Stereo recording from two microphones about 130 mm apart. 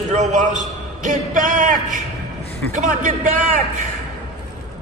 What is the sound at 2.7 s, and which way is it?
Speech, 80° right.